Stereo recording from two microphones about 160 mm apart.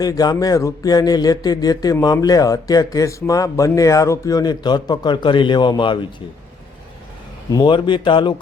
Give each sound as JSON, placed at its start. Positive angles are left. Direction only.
{"t": 0.0, "sound": "speech", "side_deg": 25}
{"t": 7.5, "sound": "speech", "side_deg": 30}